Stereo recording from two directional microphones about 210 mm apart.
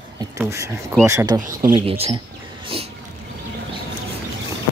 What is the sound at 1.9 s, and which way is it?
Speech, 30° right (ahead or behind).